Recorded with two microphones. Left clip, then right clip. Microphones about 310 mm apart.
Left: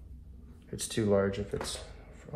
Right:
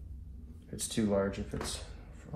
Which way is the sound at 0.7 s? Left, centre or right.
Left.